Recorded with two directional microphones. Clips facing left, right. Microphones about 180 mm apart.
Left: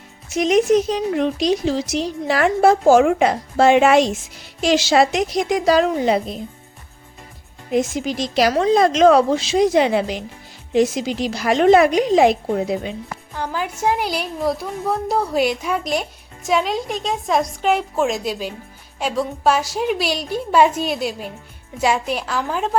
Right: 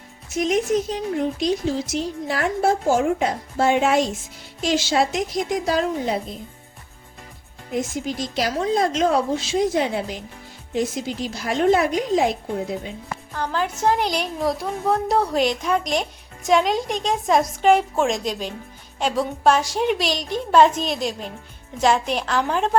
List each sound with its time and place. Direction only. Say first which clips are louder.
0.3 s speech: left 5 dB; 80° left
7.7 s speech: left 5 dB; 85° left
13.3 s a woman's voice: right 1 dB; 10° left (ahead or behind)